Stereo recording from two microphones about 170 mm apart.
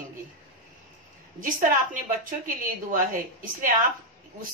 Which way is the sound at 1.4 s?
50° right (ahead or behind).